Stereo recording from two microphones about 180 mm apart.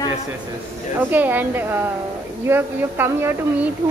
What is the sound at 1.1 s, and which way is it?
A woman's voice, 10° right (ahead or behind).